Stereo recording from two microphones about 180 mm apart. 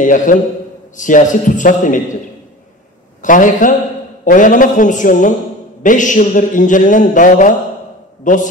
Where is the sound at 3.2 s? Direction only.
45° left (ahead or behind).